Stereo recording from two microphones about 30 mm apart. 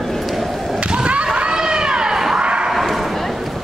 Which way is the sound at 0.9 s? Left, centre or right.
Right.